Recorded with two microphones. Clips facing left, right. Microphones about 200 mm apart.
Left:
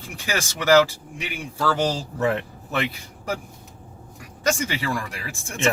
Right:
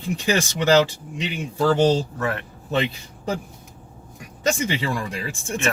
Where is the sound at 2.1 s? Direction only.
20° left (ahead or behind).